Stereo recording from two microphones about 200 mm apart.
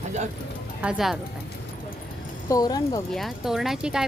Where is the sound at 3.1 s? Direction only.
Centre (ahead or behind).